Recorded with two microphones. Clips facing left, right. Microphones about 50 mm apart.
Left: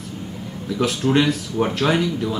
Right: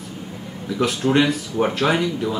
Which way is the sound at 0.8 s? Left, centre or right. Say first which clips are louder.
Right 1 dB; centre.